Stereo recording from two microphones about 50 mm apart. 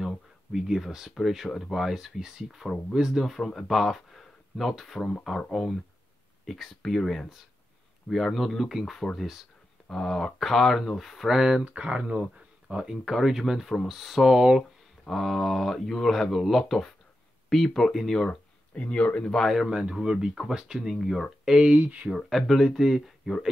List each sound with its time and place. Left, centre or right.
0.5 s speech: centre
3.3 s speech: centre
11.3 s speech: centre
11.6 s speech: right; by 18.4 s centre
18.8 s speech: left
19.7 s speech: centre
20.9 s speech: centre
21.5 s speech: centre
21.8 s speech: right
22.1 s speech: centre